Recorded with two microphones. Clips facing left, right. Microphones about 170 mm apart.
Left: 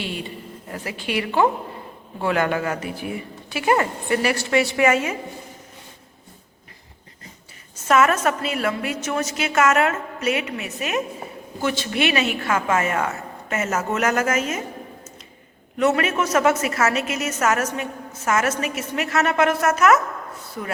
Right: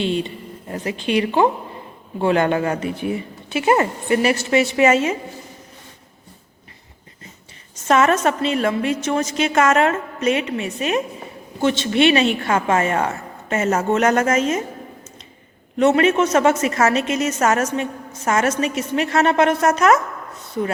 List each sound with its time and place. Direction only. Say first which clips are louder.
0.0 s a woman's voice: right 8 dB; 25° right (ahead or behind)
7.9 s a woman's voice: right 2 dB; 30° right (ahead or behind)
15.8 s a woman's voice: right 5 dB; 30° right (ahead or behind)